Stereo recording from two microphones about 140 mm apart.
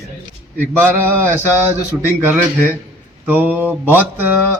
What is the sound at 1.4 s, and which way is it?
Speech, 20° left (ahead or behind).